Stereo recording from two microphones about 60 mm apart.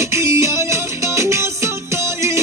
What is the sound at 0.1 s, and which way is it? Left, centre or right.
Music, right.